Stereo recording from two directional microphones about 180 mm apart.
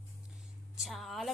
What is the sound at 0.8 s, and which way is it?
Speech, centre (ahead or behind).